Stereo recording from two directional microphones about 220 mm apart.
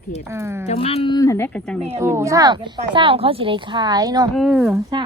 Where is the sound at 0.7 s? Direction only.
25° left (ahead or behind); by 1.8 s 5° left (ahead or behind).